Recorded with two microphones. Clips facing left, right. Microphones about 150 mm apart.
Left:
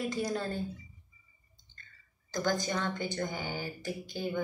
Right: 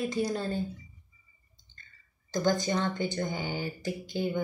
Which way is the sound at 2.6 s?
25° right (ahead or behind).